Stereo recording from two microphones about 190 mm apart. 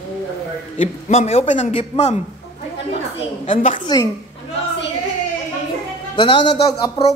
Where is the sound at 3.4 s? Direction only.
40° left (ahead or behind).